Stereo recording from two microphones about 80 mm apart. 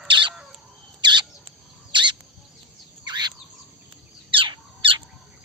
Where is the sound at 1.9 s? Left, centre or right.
Right.